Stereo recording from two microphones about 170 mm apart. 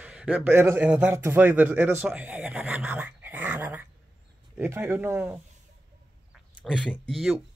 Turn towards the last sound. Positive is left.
turn(degrees=0)  # may be behind; listen again after turning